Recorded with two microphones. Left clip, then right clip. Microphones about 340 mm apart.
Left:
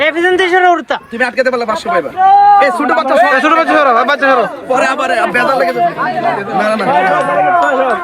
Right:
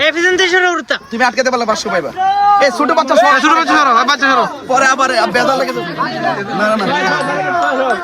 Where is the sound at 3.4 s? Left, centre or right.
Centre.